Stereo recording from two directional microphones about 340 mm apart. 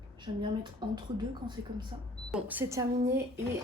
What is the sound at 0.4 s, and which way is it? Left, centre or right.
Speech, centre.